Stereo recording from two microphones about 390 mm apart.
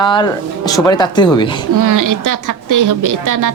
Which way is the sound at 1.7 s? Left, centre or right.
Right.